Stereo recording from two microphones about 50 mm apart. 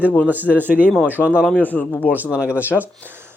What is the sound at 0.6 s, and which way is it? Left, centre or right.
Speech, right.